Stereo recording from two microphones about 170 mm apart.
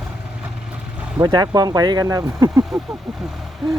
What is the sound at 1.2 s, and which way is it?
Speech, 20° right (ahead or behind).